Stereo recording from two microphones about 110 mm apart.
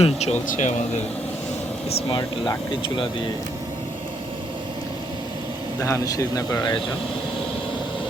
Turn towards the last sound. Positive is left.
turn(degrees=35)  # may be behind; listen again after turning